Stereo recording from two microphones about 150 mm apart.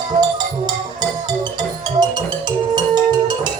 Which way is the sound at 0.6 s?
30° right (ahead or behind).